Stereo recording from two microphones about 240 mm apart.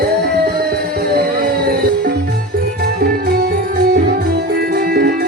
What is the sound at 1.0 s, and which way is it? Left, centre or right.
Music, right.